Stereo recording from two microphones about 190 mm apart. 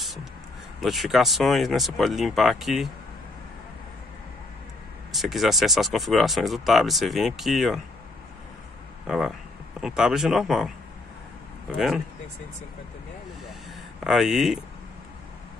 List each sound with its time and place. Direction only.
0.0 s a sound: centre (ahead or behind)
0.7 s speech: centre (ahead or behind)
5.1 s speech: centre (ahead or behind)
9.0 s speech: centre (ahead or behind)
11.7 s speech: centre (ahead or behind)
14.0 s speech: centre (ahead or behind)